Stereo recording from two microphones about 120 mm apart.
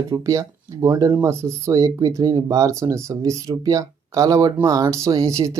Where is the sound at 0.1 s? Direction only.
25° right (ahead or behind).